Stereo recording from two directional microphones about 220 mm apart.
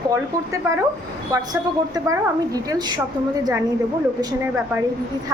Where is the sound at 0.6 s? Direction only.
15° right (ahead or behind).